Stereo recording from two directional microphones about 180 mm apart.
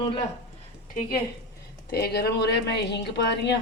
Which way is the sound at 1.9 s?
65° left (ahead or behind).